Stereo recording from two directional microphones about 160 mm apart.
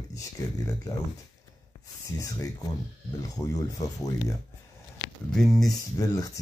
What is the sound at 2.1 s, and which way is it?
Speech, 20° left (ahead or behind).